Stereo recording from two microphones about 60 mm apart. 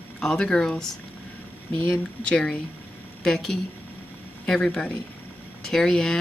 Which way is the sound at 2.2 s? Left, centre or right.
Centre.